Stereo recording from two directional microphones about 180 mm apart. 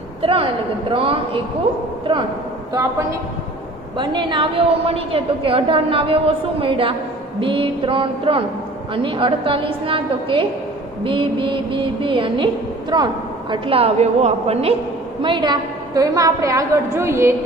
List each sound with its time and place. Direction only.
0.2 s a woman's voice: 30° right (ahead or behind)
3.9 s a woman's voice: 25° right (ahead or behind)